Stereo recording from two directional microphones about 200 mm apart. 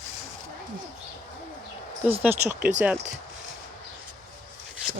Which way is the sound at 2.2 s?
10° right (ahead or behind).